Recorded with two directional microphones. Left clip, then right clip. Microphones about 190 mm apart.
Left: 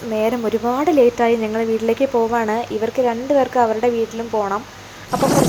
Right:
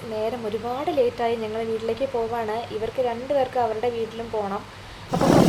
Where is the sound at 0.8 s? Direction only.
30° left (ahead or behind).